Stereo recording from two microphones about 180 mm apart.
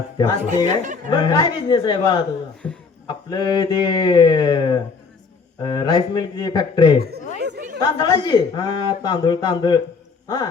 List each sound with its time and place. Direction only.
0.4 s speech: 40° right (ahead or behind)
1.1 s speech: 25° left (ahead or behind)
2.6 s a man's voice: 5° left (ahead or behind)
3.2 s speech: 25° left (ahead or behind)
7.3 s chatter: 70° right (ahead or behind)
7.8 s speech: 25° left (ahead or behind)